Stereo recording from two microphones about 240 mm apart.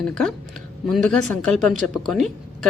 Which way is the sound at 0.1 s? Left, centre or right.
Centre.